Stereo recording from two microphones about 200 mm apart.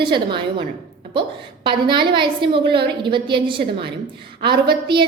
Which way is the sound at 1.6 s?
25° right (ahead or behind).